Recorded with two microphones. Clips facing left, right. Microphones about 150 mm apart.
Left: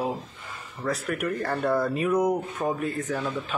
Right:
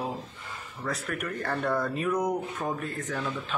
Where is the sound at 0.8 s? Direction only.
5° left (ahead or behind).